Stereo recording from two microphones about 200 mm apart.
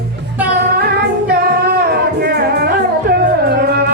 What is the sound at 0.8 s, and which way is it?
Music, 50° right (ahead or behind).